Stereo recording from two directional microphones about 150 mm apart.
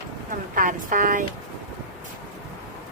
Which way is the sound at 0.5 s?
65° right (ahead or behind).